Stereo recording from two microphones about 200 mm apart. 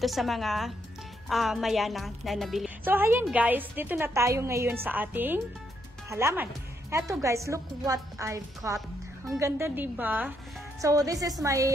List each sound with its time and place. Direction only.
0.0 s a woman's voice: centre (ahead or behind); by 11.7 s 15° right (ahead or behind)